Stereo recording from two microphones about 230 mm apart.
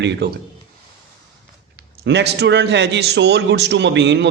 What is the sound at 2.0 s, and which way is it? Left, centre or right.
A man's voice, right.